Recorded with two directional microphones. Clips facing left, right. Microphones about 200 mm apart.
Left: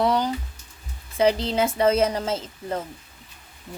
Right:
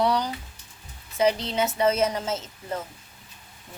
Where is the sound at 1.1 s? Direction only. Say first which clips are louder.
Left 3 dB; 30° left (ahead or behind).